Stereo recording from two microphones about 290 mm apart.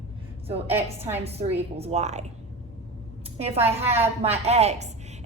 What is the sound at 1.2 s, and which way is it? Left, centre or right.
A woman's voice, right.